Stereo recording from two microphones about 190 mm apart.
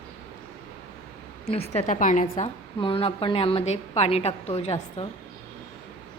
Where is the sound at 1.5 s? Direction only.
35° left (ahead or behind).